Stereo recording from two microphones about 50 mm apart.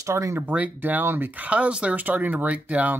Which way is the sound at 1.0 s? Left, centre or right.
Right.